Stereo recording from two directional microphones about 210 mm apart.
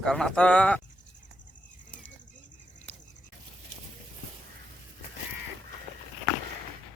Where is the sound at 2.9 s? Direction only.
10° left (ahead or behind).